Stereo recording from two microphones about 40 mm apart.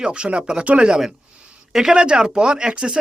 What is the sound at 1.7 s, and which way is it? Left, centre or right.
Speech, centre.